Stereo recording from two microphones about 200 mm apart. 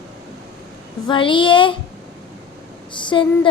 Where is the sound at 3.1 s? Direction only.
20° left (ahead or behind).